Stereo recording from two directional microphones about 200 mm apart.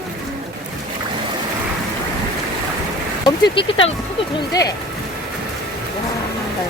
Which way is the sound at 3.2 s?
25° left (ahead or behind).